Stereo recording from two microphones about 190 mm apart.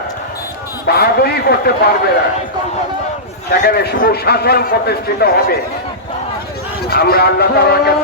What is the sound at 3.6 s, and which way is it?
A man's voice, 60° left (ahead or behind).